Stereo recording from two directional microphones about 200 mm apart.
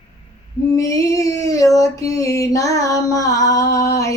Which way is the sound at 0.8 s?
15° left (ahead or behind).